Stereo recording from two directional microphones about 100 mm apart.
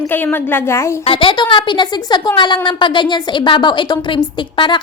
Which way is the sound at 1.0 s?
65° left (ahead or behind).